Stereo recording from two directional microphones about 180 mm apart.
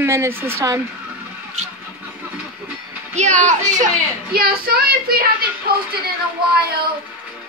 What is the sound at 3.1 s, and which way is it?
Speech, 40° right (ahead or behind).